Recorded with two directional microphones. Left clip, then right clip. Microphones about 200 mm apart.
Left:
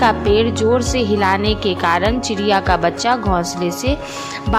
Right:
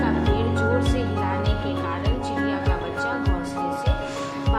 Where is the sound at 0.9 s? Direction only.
55° left (ahead or behind).